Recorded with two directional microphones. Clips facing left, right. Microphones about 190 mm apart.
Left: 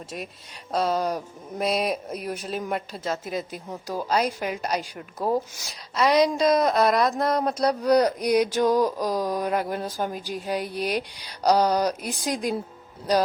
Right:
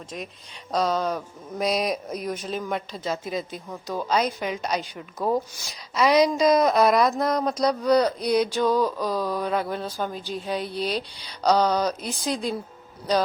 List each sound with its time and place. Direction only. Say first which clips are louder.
0.7 s speech: even; 5° left (ahead or behind)